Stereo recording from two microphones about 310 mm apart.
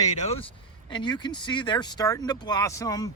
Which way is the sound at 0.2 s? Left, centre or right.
Centre.